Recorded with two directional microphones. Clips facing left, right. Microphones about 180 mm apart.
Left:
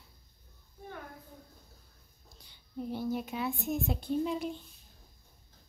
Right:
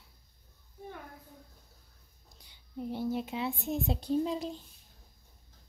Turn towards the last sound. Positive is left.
turn(degrees=-35)  # may be behind; listen again after turning